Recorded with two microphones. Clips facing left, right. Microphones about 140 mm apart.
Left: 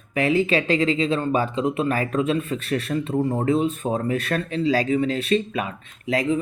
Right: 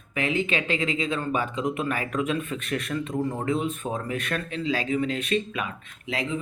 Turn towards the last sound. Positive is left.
turn(degrees=40)  # may be behind; listen again after turning